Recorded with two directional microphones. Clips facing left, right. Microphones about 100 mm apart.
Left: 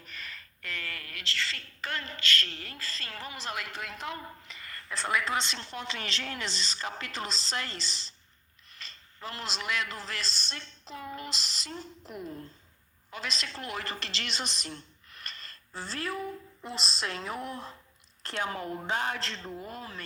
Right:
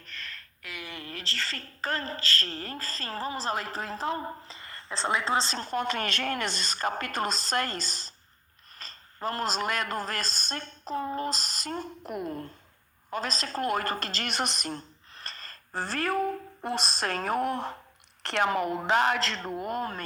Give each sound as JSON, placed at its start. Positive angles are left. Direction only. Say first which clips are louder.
{"t": 0.0, "sound": "a sound", "louder": "right 1 dB", "side_deg": 5}
{"t": 0.7, "sound": "a woman's voice", "louder": "right 1 dB", "side_deg": -15}
{"t": 13.1, "sound": "speech", "louder": "right 6 dB", "side_deg": -45}
{"t": 15.1, "sound": "speech", "louder": "right 2 dB", "side_deg": -35}
{"t": 18.2, "sound": "a man's voice", "louder": "right 8 dB", "side_deg": -75}